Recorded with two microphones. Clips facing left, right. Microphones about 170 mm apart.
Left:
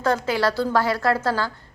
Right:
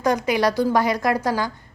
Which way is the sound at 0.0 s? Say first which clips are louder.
Right 2 dB; 15° right (ahead or behind).